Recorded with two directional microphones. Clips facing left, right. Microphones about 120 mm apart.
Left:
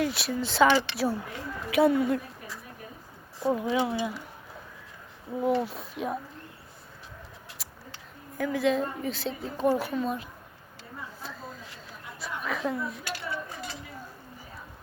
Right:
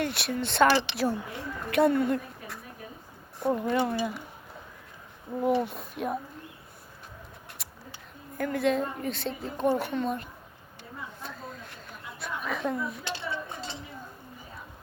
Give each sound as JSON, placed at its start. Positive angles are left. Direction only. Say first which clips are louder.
{"t": 0.0, "sound": "a woman's voice", "louder": "left 1 dB", "side_deg": 0}
{"t": 3.4, "sound": "a woman's voice", "louder": "even", "side_deg": 5}
{"t": 5.5, "sound": "a woman's voice", "louder": "right 1 dB", "side_deg": 0}
{"t": 8.4, "sound": "a woman's voice", "louder": "left 1 dB", "side_deg": 0}
{"t": 11.2, "sound": "a sound", "louder": "even", "side_deg": 0}
{"t": 13.1, "sound": "a sound", "louder": "right 1 dB", "side_deg": -25}